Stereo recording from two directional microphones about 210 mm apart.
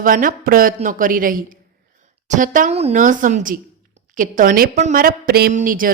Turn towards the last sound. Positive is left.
turn(degrees=-40)  # may be behind; listen again after turning